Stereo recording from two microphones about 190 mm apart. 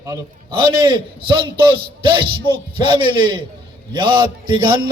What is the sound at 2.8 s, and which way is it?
A man's voice, 25° right (ahead or behind).